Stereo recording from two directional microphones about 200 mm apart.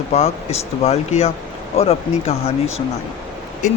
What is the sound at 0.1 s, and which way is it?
Speech, 30° left (ahead or behind).